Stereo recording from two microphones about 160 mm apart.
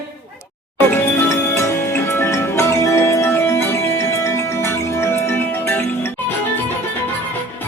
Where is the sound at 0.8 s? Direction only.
15° left (ahead or behind).